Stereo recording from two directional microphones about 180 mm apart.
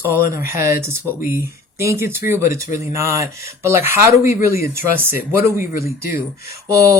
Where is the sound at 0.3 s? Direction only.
15° right (ahead or behind).